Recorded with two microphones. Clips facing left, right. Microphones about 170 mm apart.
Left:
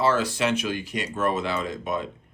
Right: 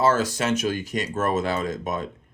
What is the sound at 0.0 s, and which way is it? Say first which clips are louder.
Speech: right 1 dB; 45° right (ahead or behind).